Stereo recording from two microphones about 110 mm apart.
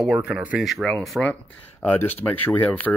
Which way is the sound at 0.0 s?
5° right (ahead or behind).